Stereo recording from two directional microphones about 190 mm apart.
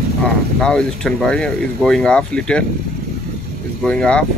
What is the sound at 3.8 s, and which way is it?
Speech, 5° left (ahead or behind).